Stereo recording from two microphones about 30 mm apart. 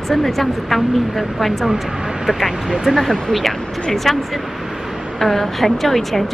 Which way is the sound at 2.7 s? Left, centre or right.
Centre.